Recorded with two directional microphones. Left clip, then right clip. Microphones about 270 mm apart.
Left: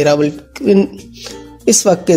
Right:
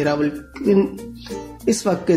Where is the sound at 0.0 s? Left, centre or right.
Left.